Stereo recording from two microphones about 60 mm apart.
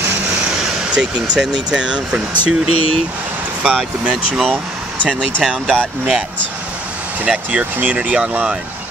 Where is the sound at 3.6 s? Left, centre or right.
Right.